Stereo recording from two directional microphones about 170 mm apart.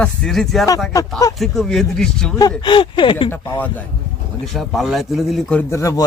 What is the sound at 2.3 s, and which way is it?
Speech, 25° left (ahead or behind).